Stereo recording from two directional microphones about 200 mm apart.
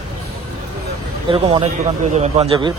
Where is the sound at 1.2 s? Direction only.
25° right (ahead or behind).